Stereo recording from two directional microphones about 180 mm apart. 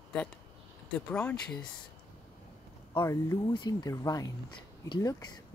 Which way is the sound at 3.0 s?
15° left (ahead or behind).